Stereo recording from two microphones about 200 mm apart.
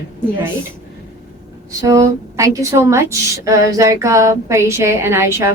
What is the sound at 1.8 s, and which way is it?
A woman's voice, 15° right (ahead or behind).